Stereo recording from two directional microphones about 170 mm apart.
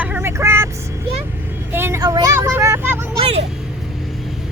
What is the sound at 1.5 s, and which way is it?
Vehicle, 15° right (ahead or behind).